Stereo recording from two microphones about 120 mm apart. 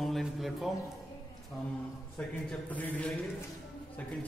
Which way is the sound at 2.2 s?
15° left (ahead or behind).